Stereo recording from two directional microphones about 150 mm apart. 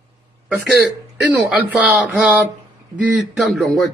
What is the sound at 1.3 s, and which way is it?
Speech, 10° right (ahead or behind).